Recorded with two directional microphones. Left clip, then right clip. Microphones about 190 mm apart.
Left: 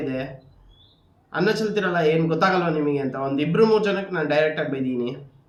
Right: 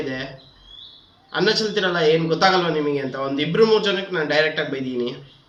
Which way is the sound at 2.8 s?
30° left (ahead or behind).